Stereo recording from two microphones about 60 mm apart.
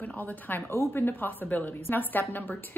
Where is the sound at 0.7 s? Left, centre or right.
Left.